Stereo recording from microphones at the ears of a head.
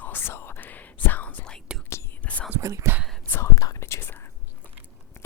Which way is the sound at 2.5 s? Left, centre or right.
Right.